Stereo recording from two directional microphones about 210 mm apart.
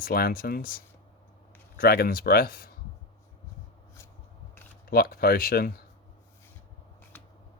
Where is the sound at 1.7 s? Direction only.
45° left (ahead or behind).